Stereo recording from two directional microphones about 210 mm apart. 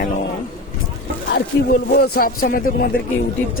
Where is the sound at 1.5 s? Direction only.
60° left (ahead or behind).